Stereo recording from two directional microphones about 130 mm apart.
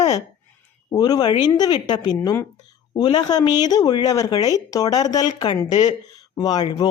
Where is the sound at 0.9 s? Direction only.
30° left (ahead or behind).